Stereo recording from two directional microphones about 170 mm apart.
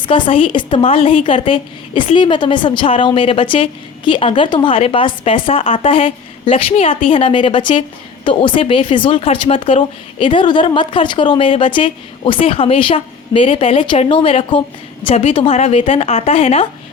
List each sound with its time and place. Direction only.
0.0 s a woman's voice: 30° left (ahead or behind)